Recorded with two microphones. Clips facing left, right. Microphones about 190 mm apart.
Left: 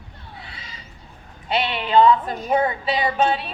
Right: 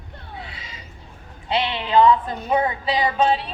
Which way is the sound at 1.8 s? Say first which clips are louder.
Left 1 dB; 25° left (ahead or behind).